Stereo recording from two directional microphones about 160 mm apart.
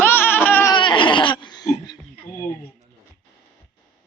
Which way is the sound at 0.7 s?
30° left (ahead or behind).